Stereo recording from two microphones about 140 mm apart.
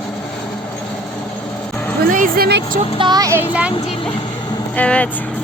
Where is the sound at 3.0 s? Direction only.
30° right (ahead or behind).